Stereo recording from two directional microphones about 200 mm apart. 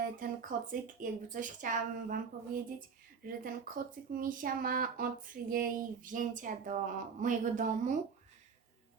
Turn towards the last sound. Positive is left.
turn(degrees=-40)  # may be behind; listen again after turning